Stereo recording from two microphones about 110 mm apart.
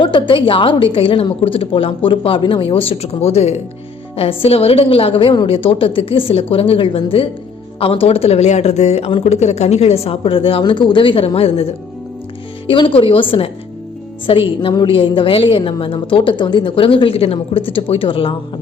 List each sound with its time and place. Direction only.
0.0 s a woman's voice: 45° left (ahead or behind); by 3.6 s 75° left (ahead or behind)
4.2 s a woman's voice: 60° left (ahead or behind)
10.6 s a woman's voice: 45° left (ahead or behind); by 11.7 s 60° left (ahead or behind)
12.6 s a woman's voice: 50° left (ahead or behind)